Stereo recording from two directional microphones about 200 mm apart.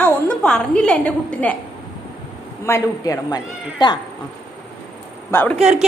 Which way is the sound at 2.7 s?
15° left (ahead or behind).